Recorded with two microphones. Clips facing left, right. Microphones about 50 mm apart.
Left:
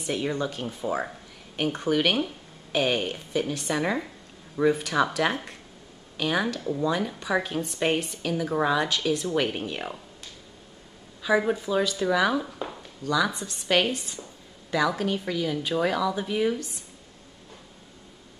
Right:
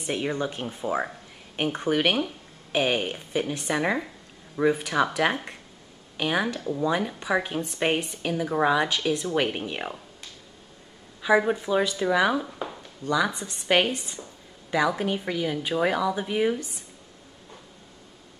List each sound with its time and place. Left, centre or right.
0.0 s a woman's voice: centre
11.2 s a woman's voice: centre